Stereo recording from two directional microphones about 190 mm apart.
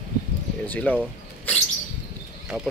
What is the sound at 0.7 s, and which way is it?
Speech, 10° left (ahead or behind).